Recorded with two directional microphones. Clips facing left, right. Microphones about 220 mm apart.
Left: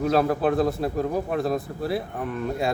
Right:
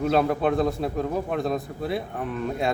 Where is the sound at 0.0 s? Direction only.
Centre (ahead or behind).